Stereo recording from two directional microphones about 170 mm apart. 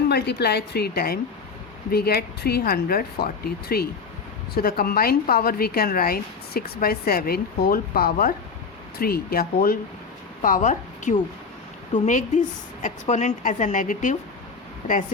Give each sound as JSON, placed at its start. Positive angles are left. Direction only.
{"t": 0.1, "sound": "a woman's voice", "side_deg": 75}
{"t": 10.4, "sound": "a woman's voice", "side_deg": 50}
{"t": 12.8, "sound": "a woman's voice", "side_deg": 45}